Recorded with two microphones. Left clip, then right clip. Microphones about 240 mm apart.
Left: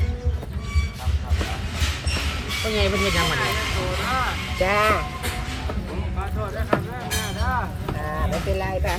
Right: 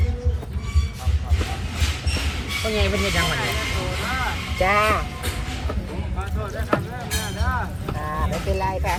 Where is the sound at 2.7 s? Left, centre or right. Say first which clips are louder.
Left 1 dB; centre.